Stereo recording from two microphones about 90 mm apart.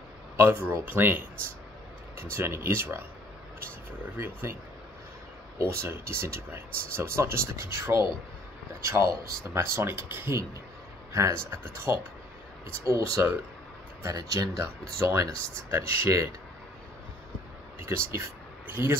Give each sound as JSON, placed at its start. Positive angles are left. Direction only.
{"t": 0.4, "sound": "speech", "side_deg": -25}
{"t": 2.3, "sound": "speech", "side_deg": -25}
{"t": 4.2, "sound": "speech", "side_deg": -30}
{"t": 5.6, "sound": "speech", "side_deg": -30}
{"t": 14.0, "sound": "speech", "side_deg": -45}
{"t": 17.7, "sound": "speech", "side_deg": -30}